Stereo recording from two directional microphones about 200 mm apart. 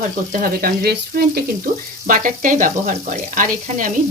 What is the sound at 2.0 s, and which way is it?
Speech, 40° right (ahead or behind).